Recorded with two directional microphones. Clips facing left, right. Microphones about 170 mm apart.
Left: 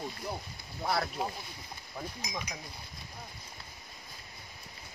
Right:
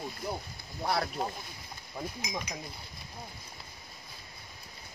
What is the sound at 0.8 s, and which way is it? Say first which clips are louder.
Speech: right 1 dB; centre (ahead or behind).